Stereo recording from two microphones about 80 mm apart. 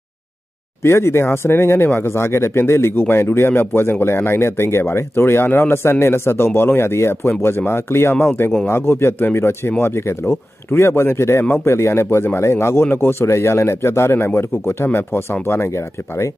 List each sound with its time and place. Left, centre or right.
0.8 s speech: left